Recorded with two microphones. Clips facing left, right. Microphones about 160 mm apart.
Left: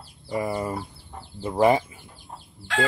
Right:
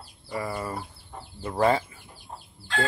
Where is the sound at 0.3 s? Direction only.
20° left (ahead or behind).